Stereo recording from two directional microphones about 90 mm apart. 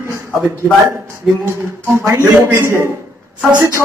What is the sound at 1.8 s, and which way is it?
Speech, 30° right (ahead or behind).